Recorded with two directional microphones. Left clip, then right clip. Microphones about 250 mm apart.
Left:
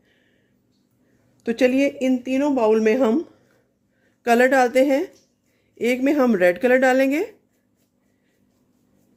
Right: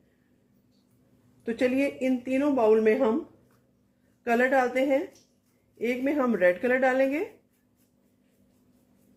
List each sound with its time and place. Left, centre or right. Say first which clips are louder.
1.5 s speech: left 7 dB; left
4.2 s speech: left 7 dB; left